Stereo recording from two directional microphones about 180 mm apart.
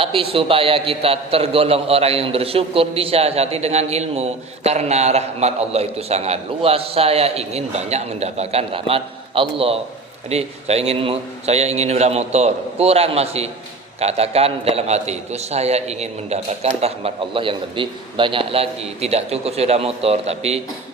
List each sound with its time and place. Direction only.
0.0 s a man's voice: 30° right (ahead or behind)